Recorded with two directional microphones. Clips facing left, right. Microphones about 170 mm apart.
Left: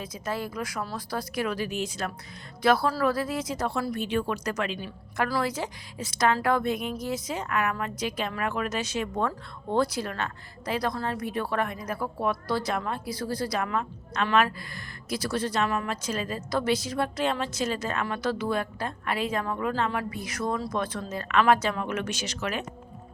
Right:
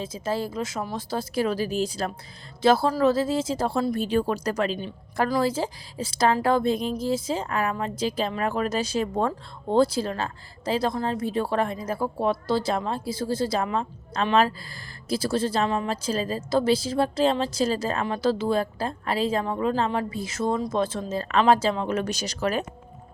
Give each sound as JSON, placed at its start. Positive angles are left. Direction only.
{"t": 0.0, "sound": "a woman's voice", "side_deg": -25}